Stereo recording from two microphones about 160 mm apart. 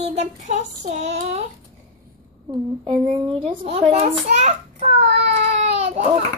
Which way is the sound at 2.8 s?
30° right (ahead or behind).